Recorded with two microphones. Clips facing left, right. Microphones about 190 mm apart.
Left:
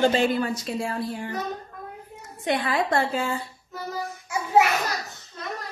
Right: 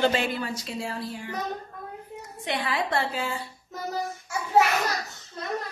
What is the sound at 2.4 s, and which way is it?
Speech, 50° left (ahead or behind).